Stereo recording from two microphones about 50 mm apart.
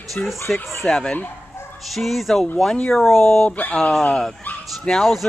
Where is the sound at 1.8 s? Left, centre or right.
Centre.